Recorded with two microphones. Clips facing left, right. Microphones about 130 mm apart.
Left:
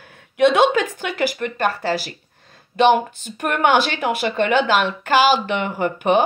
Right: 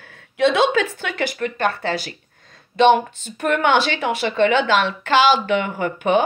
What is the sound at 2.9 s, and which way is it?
A woman's voice, 10° left (ahead or behind).